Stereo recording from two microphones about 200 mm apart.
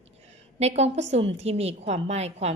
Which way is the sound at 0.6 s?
35° right (ahead or behind).